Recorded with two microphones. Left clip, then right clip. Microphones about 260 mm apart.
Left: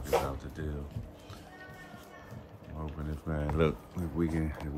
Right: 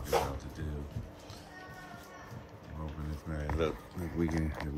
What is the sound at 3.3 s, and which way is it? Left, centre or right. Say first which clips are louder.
Speech: left 6 dB; left.